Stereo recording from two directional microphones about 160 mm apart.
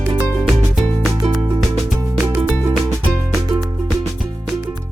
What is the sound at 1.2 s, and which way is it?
Music, 30° right (ahead or behind).